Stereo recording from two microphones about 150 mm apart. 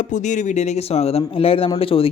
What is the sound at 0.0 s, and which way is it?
A man's voice, 55° left (ahead or behind).